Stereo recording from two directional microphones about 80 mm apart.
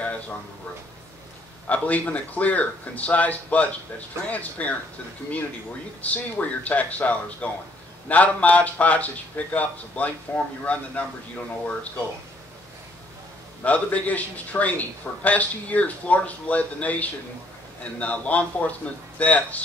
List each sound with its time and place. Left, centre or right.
1.7 s speech: centre
6.0 s speech: centre
13.7 s speech: centre